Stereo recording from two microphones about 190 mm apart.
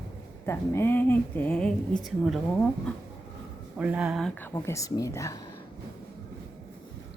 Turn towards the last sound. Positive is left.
turn(degrees=15)  # may be behind; listen again after turning